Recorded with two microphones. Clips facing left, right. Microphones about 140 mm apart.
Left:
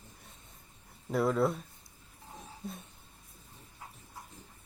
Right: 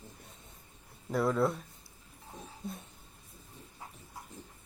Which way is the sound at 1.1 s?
Centre (ahead or behind).